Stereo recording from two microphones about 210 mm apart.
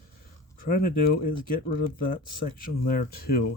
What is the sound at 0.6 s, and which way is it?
Speech, 45° left (ahead or behind).